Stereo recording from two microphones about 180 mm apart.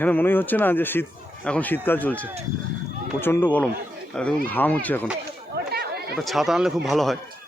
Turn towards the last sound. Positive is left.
turn(degrees=0)  # may be behind; listen again after turning